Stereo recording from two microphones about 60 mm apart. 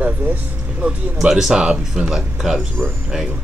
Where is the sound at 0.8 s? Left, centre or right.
Centre.